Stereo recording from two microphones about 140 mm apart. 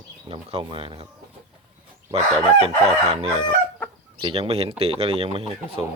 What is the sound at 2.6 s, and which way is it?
Speech, 45° right (ahead or behind).